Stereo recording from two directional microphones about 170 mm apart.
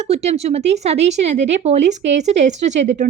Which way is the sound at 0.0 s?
40° right (ahead or behind).